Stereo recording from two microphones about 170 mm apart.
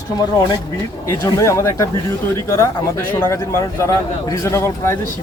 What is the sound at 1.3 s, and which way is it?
Speech, 15° left (ahead or behind).